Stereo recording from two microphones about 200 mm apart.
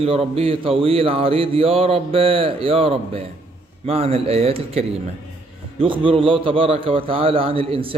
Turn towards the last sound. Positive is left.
turn(degrees=-30)  # may be behind; listen again after turning